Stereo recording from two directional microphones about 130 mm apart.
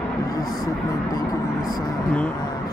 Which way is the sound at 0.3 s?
25° left (ahead or behind).